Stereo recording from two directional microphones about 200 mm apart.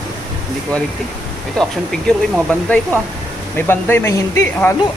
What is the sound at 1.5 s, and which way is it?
Speech, centre (ahead or behind).